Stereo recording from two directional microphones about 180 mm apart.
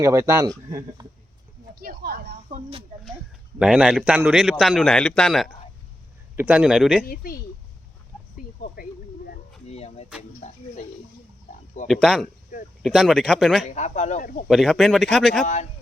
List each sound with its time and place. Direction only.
0.0 s speech: 15° right (ahead or behind)
1.7 s speech: 55° right (ahead or behind)
3.6 s a man's voice: 5° right (ahead or behind)
6.3 s a man's voice: 10° right (ahead or behind)
7.0 s speech: 55° left (ahead or behind)
8.6 s a sound: 55° left (ahead or behind)
9.6 s vehicle: 35° left (ahead or behind)
11.9 s a man's voice: centre (ahead or behind)
13.7 s speech: 40° left (ahead or behind)
14.4 s a man's voice: centre (ahead or behind)